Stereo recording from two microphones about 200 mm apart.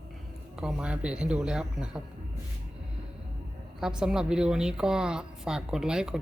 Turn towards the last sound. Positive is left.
turn(degrees=-5)  # may be behind; listen again after turning